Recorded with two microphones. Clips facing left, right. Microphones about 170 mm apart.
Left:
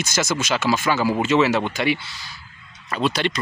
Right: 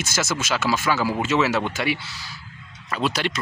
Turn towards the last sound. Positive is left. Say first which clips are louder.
# left 2 dB
turn(degrees=-5)  # may be behind; listen again after turning